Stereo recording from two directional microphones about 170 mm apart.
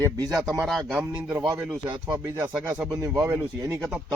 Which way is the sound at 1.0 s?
20° right (ahead or behind).